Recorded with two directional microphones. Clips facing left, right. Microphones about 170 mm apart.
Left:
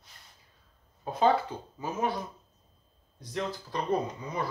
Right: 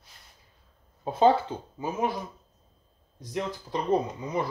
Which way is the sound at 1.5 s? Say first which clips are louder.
Right 3 dB; 25° right (ahead or behind).